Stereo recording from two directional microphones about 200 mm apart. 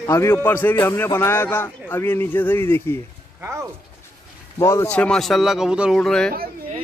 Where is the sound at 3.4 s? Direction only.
15° right (ahead or behind).